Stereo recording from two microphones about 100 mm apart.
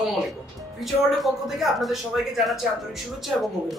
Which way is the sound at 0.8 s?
Centre (ahead or behind).